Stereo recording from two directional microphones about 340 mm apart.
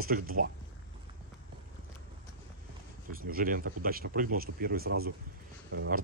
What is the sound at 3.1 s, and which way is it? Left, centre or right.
Speech, right.